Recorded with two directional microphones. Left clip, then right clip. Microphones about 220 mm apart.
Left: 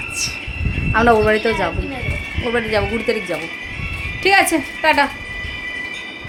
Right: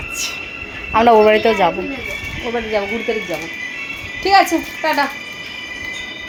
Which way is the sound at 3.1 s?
20° left (ahead or behind).